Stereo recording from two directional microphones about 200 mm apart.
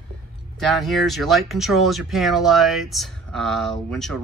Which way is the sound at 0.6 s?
Centre (ahead or behind).